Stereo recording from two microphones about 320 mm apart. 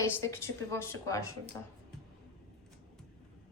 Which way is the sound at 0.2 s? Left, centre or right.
Centre.